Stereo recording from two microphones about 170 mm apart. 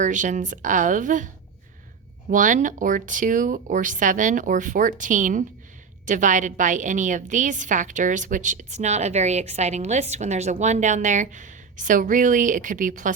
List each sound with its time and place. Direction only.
0.0 s a woman's voice: 50° right (ahead or behind)
2.3 s a woman's voice: 50° right (ahead or behind)